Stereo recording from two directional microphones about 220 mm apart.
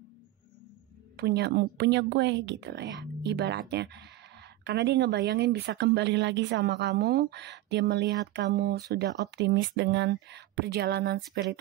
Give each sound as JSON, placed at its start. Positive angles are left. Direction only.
{"t": 1.1, "sound": "a woman's voice", "side_deg": -50}